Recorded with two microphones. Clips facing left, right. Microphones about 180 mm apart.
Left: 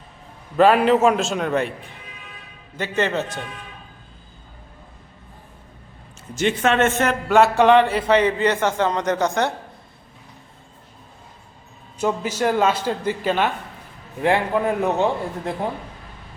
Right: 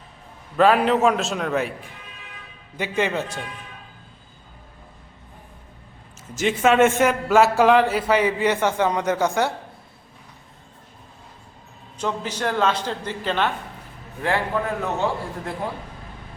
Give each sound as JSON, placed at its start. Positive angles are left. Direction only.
{"t": 0.5, "sound": "a man's voice", "side_deg": 0}
{"t": 2.7, "sound": "a man's voice", "side_deg": -10}
{"t": 6.3, "sound": "a man's voice", "side_deg": -5}
{"t": 11.9, "sound": "a man's voice", "side_deg": 10}